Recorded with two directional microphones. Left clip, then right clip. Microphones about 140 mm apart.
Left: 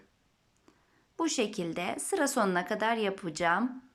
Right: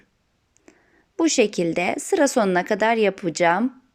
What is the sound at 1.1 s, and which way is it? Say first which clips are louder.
A woman's voice: right 12 dB; 30° right (ahead or behind).